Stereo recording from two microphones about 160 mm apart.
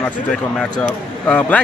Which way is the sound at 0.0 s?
5° left (ahead or behind).